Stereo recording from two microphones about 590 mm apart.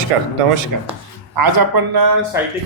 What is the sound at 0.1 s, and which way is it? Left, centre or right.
Speech, right.